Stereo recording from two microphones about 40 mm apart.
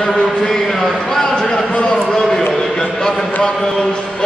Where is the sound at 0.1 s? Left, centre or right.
Centre.